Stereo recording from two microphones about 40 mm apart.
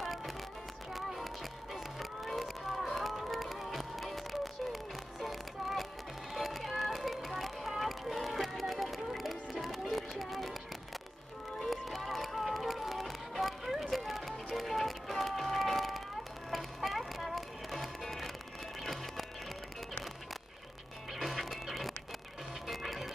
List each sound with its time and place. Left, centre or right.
0.0 s music: centre
11.6 s music: centre
21.1 s music: centre
22.7 s printer: centre